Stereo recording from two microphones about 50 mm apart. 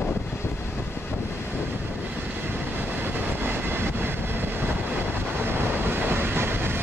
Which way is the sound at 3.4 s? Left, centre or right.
Right.